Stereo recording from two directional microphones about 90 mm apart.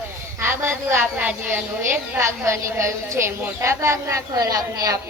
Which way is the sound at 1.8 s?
30° right (ahead or behind).